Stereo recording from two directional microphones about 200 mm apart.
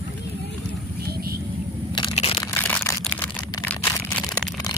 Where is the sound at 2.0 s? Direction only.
25° left (ahead or behind).